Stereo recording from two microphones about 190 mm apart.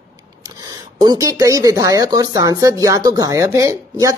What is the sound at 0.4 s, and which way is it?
Speech, 20° right (ahead or behind).